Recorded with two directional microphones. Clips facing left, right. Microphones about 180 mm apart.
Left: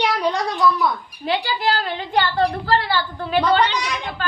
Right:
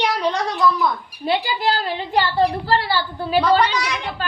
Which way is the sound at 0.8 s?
5° right (ahead or behind).